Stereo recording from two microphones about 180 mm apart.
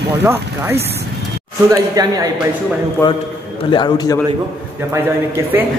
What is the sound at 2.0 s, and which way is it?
Speech, 20° right (ahead or behind).